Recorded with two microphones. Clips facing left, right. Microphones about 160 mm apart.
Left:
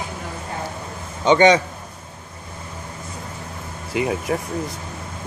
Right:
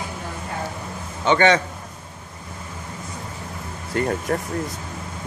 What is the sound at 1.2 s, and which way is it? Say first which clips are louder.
Speech: left 3 dB; 15° left (ahead or behind).